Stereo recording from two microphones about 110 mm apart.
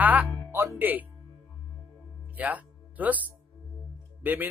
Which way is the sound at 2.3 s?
15° right (ahead or behind).